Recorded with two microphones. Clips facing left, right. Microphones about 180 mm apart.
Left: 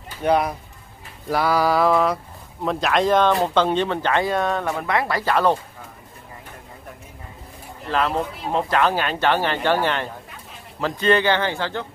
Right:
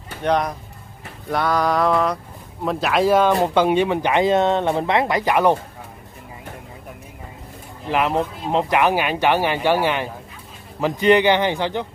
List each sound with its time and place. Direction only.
0.2 s speech: 5° left (ahead or behind)
1.3 s mantra: 5° left (ahead or behind)
3.3 s speech: 15° right (ahead or behind)
7.8 s speech: 15° right (ahead or behind)